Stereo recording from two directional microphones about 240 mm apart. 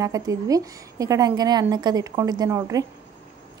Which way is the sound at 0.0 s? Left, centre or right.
Centre.